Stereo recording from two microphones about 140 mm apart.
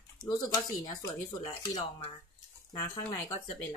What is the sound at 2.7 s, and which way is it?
Speech, 30° left (ahead or behind).